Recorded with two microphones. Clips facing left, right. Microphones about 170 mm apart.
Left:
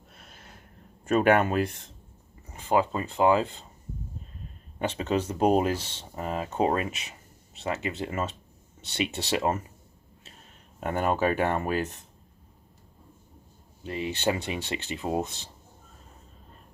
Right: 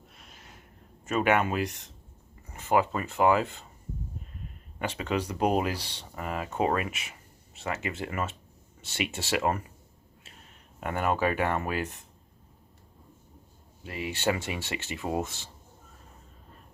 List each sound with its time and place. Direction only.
1.0 s speech: 35° left (ahead or behind)
1.6 s speech: 30° left (ahead or behind)
4.8 s speech: 30° left (ahead or behind)
10.8 s speech: 30° left (ahead or behind)
13.8 s speech: 25° left (ahead or behind)